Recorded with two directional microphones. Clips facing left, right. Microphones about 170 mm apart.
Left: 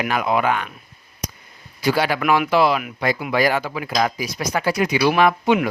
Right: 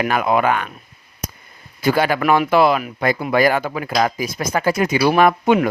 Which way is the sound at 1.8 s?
50° right (ahead or behind).